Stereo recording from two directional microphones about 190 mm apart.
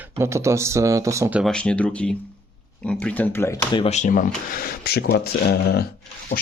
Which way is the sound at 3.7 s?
30° left (ahead or behind).